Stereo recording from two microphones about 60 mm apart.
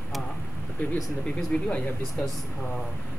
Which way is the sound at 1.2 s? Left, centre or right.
Centre.